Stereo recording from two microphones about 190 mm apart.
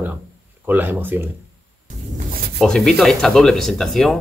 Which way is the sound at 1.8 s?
45° right (ahead or behind).